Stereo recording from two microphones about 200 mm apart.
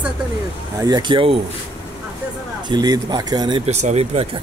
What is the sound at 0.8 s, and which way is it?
Speech, 20° right (ahead or behind).